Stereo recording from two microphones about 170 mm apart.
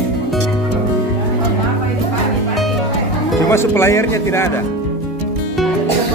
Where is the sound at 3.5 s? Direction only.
15° left (ahead or behind).